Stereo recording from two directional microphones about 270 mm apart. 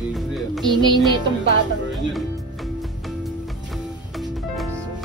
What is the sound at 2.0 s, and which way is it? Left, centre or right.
Music, centre.